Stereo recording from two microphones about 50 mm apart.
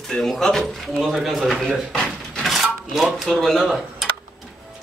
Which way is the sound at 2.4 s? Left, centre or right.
Centre.